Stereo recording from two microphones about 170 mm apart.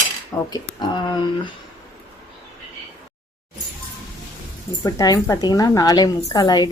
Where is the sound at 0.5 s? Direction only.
25° left (ahead or behind).